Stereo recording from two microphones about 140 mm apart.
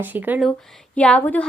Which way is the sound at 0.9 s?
10° left (ahead or behind).